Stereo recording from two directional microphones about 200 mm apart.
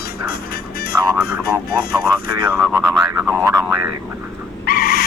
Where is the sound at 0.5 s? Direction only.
50° left (ahead or behind).